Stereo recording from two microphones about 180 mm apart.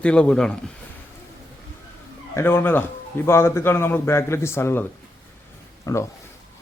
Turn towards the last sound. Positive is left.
turn(degrees=15)  # may be behind; listen again after turning